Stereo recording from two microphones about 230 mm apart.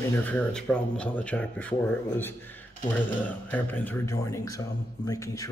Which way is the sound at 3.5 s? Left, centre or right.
Centre.